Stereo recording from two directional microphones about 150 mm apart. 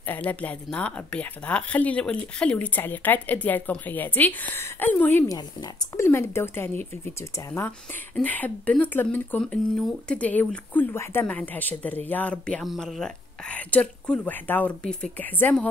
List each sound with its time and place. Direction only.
0.0 s speech: 10° left (ahead or behind)